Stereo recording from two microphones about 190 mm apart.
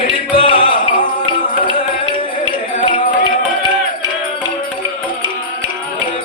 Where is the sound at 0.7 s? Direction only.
45° left (ahead or behind).